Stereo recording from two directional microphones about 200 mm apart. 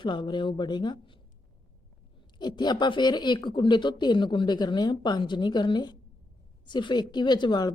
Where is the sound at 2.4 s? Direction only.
20° left (ahead or behind).